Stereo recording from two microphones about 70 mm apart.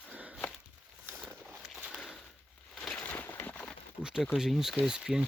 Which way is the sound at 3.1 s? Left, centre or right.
Left.